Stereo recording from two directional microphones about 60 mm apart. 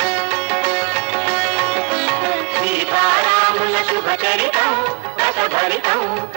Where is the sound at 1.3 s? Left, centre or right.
Right.